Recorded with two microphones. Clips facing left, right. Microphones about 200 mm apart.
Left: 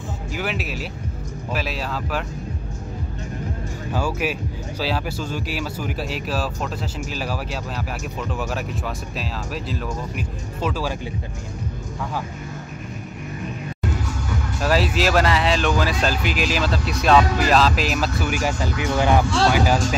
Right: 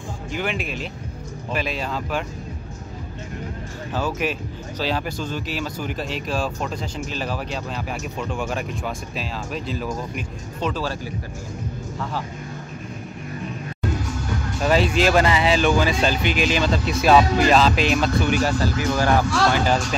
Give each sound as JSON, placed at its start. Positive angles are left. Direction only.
{"t": 0.3, "sound": "speech", "side_deg": 5}
{"t": 3.9, "sound": "speech", "side_deg": 10}
{"t": 14.6, "sound": "speech", "side_deg": 0}
{"t": 19.5, "sound": "speech", "side_deg": 5}